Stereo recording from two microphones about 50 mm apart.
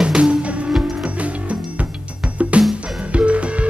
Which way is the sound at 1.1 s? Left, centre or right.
Right.